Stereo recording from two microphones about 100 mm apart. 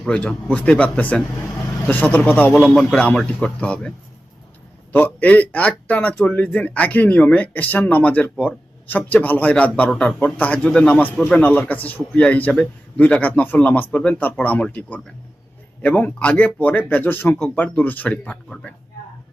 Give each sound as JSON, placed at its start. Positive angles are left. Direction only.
{"t": 0.0, "sound": "a man's voice", "side_deg": 10}
{"t": 2.6, "sound": "a man's voice", "side_deg": 5}